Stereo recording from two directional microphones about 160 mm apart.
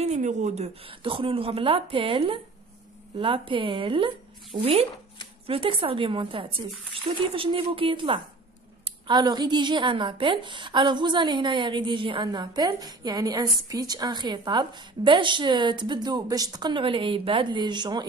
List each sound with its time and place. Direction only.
0.0 s a woman's voice: 45° right (ahead or behind); by 18.0 s 25° right (ahead or behind)